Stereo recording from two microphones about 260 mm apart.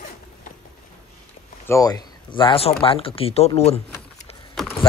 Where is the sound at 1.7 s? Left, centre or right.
Centre.